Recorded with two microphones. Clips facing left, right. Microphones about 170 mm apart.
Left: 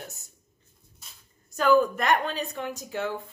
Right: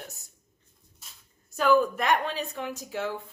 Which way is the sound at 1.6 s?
Centre (ahead or behind).